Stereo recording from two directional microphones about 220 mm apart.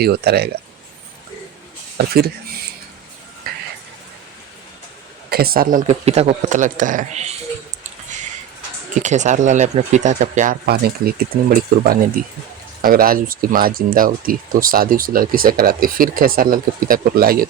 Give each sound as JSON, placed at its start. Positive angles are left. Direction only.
{"t": 0.0, "sound": "speech", "side_deg": -45}
{"t": 2.0, "sound": "speech", "side_deg": -45}
{"t": 3.5, "sound": "a sound", "side_deg": -45}
{"t": 5.3, "sound": "speech", "side_deg": -45}
{"t": 9.0, "sound": "speech", "side_deg": -35}
{"t": 12.2, "sound": "speech", "side_deg": -40}